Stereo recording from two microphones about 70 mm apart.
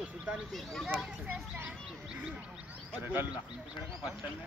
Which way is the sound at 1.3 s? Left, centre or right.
Right.